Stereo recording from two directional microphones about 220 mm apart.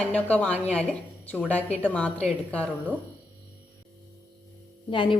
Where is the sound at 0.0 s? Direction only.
5° left (ahead or behind).